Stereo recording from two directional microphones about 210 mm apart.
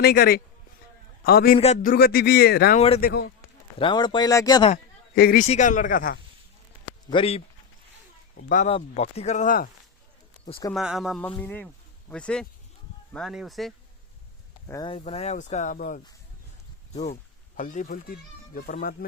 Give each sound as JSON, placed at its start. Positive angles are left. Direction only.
{"t": 0.0, "sound": "speech", "side_deg": 50}
{"t": 1.5, "sound": "speech", "side_deg": 30}
{"t": 2.7, "sound": "speech", "side_deg": 30}
{"t": 3.0, "sound": "speech", "side_deg": 50}
{"t": 3.8, "sound": "speech", "side_deg": 20}
{"t": 5.1, "sound": "speech", "side_deg": 45}
{"t": 7.1, "sound": "speech", "side_deg": 25}
{"t": 8.4, "sound": "speech", "side_deg": 35}
{"t": 10.8, "sound": "speech", "side_deg": 0}
{"t": 14.7, "sound": "speech", "side_deg": 20}